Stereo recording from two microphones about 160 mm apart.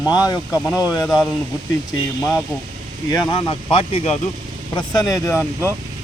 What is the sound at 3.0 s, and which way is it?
Speech, 25° left (ahead or behind).